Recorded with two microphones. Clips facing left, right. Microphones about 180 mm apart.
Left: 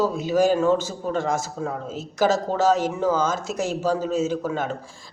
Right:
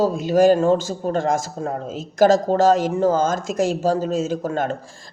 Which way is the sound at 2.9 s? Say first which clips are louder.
Right 4 dB; 50° right (ahead or behind).